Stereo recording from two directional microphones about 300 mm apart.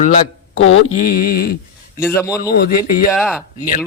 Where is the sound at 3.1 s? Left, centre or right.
Centre.